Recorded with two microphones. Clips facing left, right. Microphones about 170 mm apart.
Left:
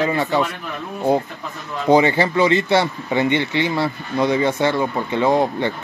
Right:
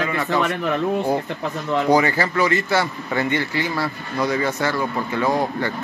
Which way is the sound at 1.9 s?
25° left (ahead or behind).